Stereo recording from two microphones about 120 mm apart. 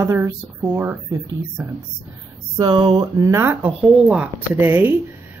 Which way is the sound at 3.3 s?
20° right (ahead or behind).